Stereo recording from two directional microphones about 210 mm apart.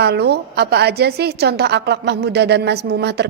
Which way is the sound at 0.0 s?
50° right (ahead or behind).